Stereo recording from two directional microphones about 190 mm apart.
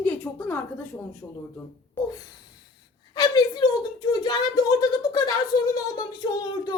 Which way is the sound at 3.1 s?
20° left (ahead or behind).